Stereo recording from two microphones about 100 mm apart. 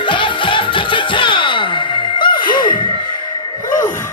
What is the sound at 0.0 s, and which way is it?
Music, 55° left (ahead or behind).